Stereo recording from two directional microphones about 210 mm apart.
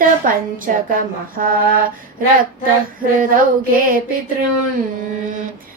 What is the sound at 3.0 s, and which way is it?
Child singing, 40° right (ahead or behind).